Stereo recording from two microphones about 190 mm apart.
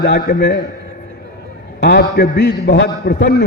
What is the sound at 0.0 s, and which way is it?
Speech, 60° left (ahead or behind).